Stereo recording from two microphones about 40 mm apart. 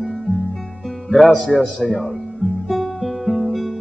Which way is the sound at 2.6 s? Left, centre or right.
Centre.